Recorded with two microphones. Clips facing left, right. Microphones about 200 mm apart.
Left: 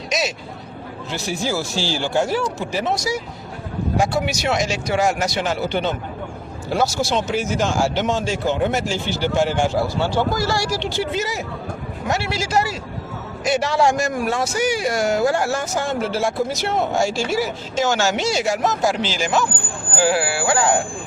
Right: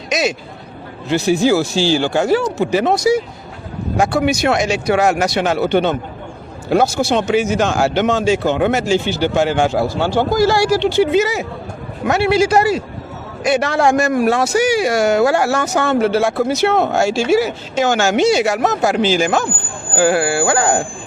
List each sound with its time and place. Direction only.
0.1 s speech: 55° right (ahead or behind)